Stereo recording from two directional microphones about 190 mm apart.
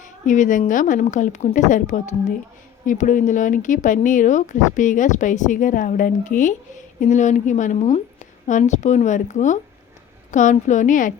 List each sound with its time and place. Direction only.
0.0 s speech: 40° left (ahead or behind)